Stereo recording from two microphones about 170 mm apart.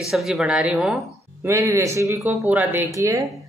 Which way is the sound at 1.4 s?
15° right (ahead or behind).